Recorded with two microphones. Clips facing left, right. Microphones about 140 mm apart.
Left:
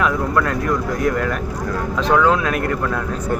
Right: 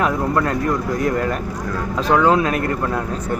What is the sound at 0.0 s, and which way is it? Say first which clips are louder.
Speech: even; 35° right (ahead or behind).